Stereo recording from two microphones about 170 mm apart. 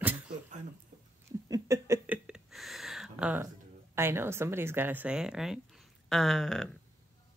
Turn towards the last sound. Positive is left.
turn(degrees=0)  # may be behind; listen again after turning